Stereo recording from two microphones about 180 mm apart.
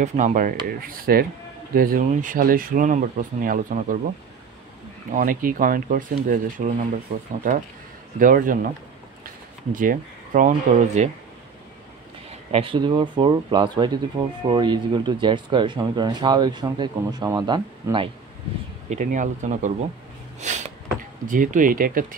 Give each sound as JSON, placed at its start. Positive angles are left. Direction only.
{"t": 0.0, "sound": "speech", "side_deg": -45}
{"t": 5.1, "sound": "speech", "side_deg": -50}
{"t": 9.7, "sound": "speech", "side_deg": -50}
{"t": 12.3, "sound": "speech", "side_deg": -35}
{"t": 18.9, "sound": "speech", "side_deg": -45}
{"t": 20.3, "sound": "a sound", "side_deg": -40}
{"t": 21.3, "sound": "speech", "side_deg": -50}